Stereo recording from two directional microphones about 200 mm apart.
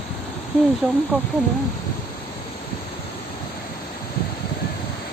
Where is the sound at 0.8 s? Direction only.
5° right (ahead or behind).